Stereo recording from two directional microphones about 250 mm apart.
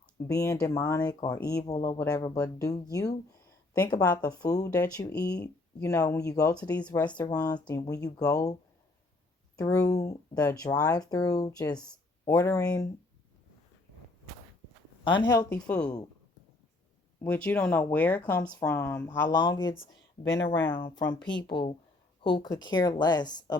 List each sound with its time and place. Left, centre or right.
0.3 s speech: centre
3.8 s speech: centre
7.2 s speech: centre
9.6 s speech: centre
15.0 s speech: centre
17.2 s speech: centre
20.0 s speech: left
20.7 s speech: centre